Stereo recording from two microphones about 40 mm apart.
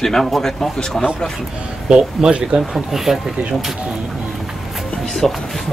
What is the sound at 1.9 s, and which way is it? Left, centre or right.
Speech, centre.